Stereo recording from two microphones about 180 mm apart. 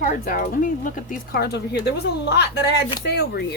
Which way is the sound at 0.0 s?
50° left (ahead or behind).